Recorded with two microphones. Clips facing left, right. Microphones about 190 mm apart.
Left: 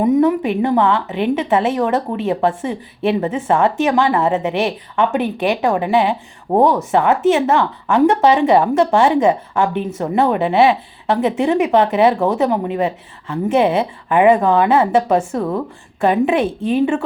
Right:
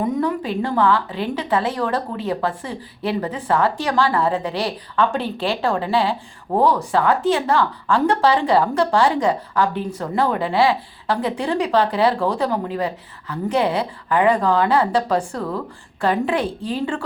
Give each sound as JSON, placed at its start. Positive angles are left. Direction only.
{"t": 0.0, "sound": "a woman's voice", "side_deg": 20}